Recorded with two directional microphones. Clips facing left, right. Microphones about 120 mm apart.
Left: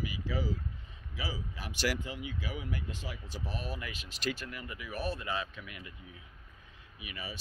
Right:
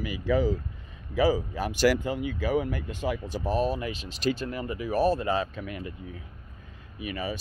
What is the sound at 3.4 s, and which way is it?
Speech, 30° right (ahead or behind).